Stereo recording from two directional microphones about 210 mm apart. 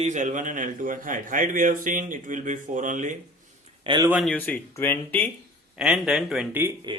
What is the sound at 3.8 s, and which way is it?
Speech, 25° right (ahead or behind).